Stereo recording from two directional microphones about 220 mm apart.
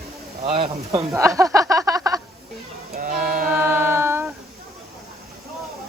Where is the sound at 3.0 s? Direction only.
40° right (ahead or behind).